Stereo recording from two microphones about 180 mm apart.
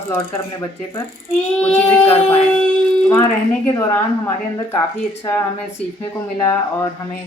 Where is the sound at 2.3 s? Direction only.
5° left (ahead or behind).